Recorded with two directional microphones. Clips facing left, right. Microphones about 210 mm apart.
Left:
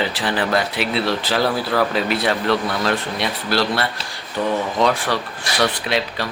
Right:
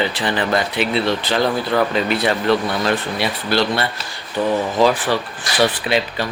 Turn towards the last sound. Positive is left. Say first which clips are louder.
# right 2 dB
turn(degrees=0)  # may be behind; listen again after turning